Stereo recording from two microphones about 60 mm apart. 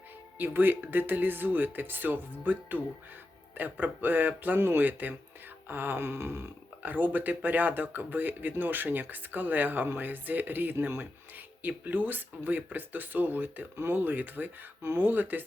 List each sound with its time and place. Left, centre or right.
0.3 s speech: right
5.6 s a sound: right
6.8 s speech: right